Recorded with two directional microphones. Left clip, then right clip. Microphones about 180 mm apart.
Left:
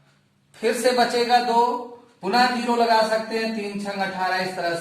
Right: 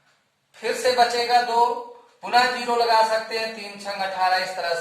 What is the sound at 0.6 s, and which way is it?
Speech, 20° left (ahead or behind).